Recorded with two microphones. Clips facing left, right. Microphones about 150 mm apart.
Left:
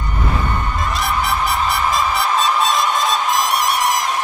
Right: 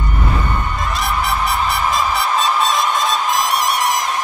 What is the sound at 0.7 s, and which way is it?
Music, centre (ahead or behind).